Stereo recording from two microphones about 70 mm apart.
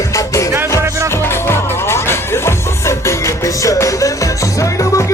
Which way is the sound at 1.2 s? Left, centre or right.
Left.